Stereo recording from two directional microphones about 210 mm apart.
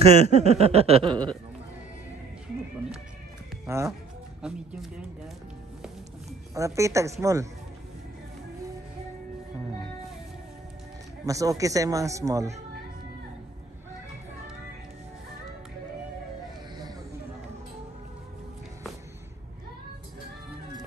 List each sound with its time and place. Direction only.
0.0 s a sound: 30° right (ahead or behind)
3.6 s speech: 15° right (ahead or behind)
6.5 s a man's voice: 15° right (ahead or behind)
11.2 s a man's voice: 15° right (ahead or behind)